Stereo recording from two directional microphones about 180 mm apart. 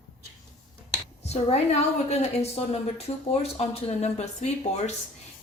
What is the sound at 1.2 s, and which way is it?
A woman's voice, 35° left (ahead or behind).